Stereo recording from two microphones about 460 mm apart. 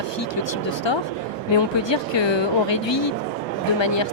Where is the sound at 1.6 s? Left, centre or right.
Left.